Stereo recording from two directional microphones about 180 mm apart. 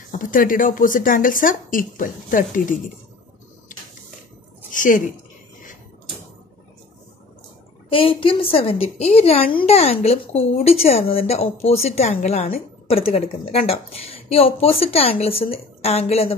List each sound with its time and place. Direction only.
0.1 s speech: 50° left (ahead or behind)
3.7 s a sound: 50° left (ahead or behind)
4.7 s speech: 45° left (ahead or behind)
7.9 s a woman's voice: 30° left (ahead or behind)